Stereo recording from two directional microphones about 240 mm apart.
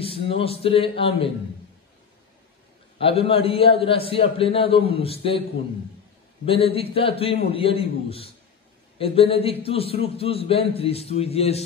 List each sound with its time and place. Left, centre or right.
0.0 s a man's voice: left
3.0 s a man's voice: left
6.4 s a man's voice: left